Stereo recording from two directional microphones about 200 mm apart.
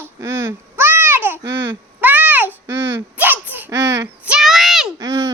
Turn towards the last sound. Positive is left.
turn(degrees=-15)  # may be behind; listen again after turning